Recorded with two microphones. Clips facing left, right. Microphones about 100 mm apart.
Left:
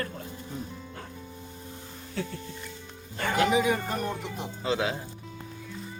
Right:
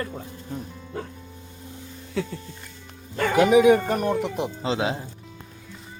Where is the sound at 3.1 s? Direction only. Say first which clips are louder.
Right 7 dB; 70° right (ahead or behind).